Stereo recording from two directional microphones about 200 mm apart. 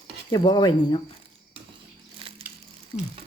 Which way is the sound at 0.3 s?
20° left (ahead or behind).